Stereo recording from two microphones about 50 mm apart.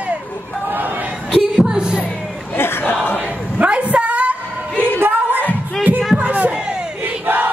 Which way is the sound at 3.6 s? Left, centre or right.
Right.